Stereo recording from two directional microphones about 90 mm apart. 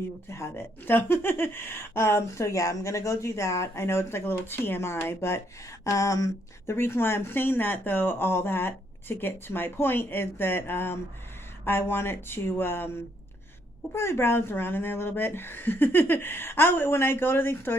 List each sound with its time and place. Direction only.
0.3 s speech: 30° left (ahead or behind)